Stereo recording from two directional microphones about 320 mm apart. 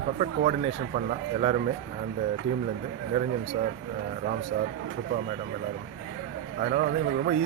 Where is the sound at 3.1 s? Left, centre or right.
Centre.